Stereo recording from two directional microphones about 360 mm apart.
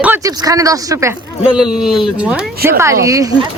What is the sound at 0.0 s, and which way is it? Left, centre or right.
Speech, centre.